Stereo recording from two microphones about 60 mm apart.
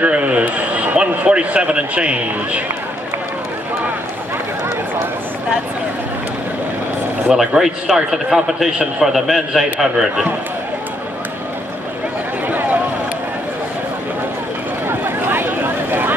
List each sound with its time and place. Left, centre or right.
0.0 s a man's voice: right
7.2 s speech: centre
14.9 s a sound: right